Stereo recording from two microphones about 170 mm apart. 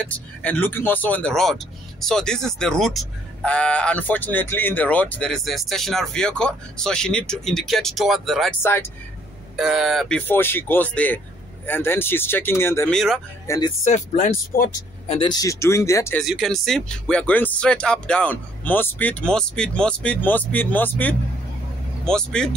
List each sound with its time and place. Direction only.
0.1 s speech: 10° left (ahead or behind)
9.6 s speech: centre (ahead or behind); by 12.9 s 15° left (ahead or behind)
12.9 s speech: centre (ahead or behind)
13.5 s speech: 15° left (ahead or behind)
13.8 s speech: 45° left (ahead or behind)
15.0 s speech: 30° left (ahead or behind)
16.2 s speech: centre (ahead or behind)